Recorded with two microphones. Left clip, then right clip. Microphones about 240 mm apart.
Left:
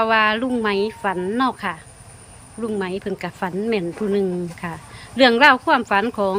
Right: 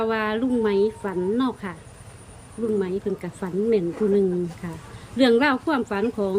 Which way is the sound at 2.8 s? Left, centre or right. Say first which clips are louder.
Even; centre.